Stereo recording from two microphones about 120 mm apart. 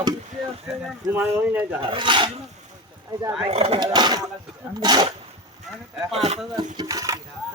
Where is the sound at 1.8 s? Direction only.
45° right (ahead or behind).